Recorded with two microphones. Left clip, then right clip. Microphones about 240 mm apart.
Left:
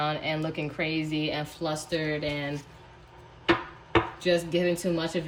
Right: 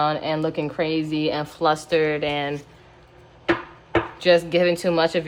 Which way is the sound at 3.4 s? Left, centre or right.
Centre.